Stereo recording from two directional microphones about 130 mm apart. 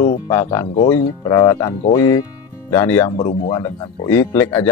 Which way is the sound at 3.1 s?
40° left (ahead or behind).